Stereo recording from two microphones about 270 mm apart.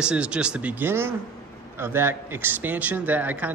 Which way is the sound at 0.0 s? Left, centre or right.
Centre.